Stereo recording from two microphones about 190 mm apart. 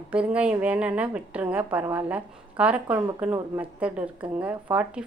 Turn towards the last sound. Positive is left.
turn(degrees=-5)  # may be behind; listen again after turning